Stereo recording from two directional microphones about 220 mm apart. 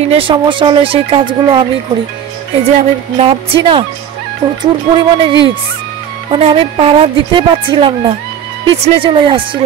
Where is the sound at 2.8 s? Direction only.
25° right (ahead or behind).